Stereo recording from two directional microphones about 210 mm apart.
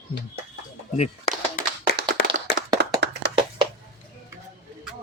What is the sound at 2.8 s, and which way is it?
Tap, 55° right (ahead or behind).